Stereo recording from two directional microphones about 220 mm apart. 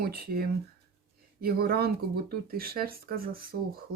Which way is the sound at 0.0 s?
45° right (ahead or behind).